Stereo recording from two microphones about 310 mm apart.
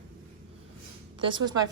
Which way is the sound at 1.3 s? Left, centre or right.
Centre.